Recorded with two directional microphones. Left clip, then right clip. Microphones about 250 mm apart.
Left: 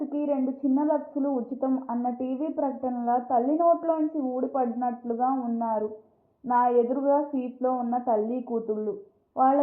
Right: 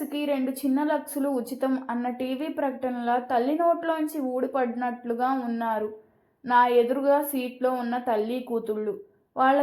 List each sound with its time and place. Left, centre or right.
0.2 s a woman's voice: right